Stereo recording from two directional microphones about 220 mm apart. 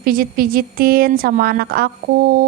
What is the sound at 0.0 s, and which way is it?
A woman's voice, 40° right (ahead or behind).